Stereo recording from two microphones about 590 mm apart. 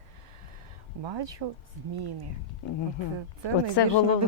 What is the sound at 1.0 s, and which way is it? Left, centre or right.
Speech, right.